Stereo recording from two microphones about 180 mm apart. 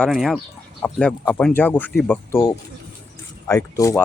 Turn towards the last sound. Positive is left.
turn(degrees=15)  # may be behind; listen again after turning